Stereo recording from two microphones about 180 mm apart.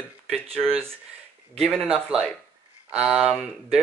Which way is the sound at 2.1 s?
5° right (ahead or behind).